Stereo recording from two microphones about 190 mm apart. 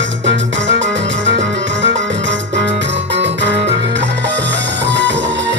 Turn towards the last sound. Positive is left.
turn(degrees=-70)  # may be behind; listen again after turning